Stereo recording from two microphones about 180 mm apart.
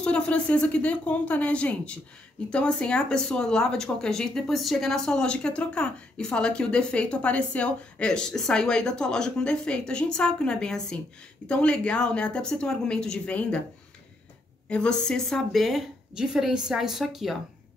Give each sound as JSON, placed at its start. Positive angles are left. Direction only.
{"t": 0.0, "sound": "speech", "side_deg": 5}
{"t": 14.7, "sound": "speech", "side_deg": 5}